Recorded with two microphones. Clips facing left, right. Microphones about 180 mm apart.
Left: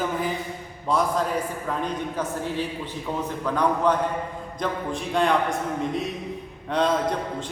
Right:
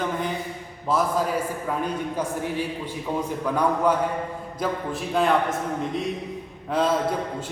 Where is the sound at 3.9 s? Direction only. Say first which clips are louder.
Even; 10° right (ahead or behind).